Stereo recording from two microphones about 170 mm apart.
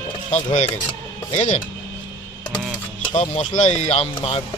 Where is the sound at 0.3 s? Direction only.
40° left (ahead or behind).